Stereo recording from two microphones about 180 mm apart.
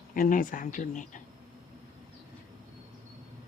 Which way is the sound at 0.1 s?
50° left (ahead or behind).